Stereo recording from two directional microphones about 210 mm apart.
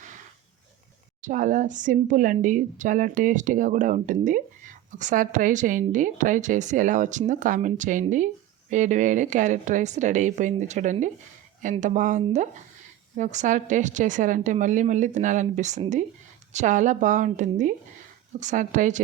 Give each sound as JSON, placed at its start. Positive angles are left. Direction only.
{"t": 1.2, "sound": "speech", "side_deg": -40}